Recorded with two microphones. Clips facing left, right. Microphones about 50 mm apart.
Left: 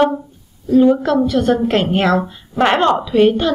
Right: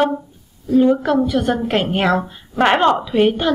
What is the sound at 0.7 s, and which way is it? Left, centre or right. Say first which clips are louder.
A woman's voice: left 2 dB; centre.